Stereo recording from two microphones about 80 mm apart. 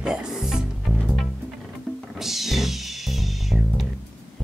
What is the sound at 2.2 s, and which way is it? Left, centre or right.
Music, centre.